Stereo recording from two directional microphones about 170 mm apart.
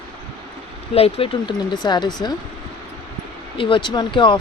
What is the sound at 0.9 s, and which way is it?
Speech, 35° left (ahead or behind).